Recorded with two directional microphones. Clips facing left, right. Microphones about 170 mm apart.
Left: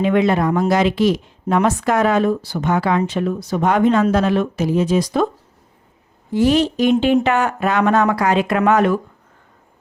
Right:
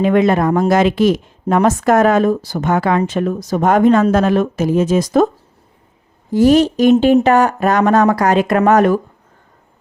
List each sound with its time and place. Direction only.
0.0 s a woman's voice: 45° right (ahead or behind)
6.3 s speech: 45° right (ahead or behind)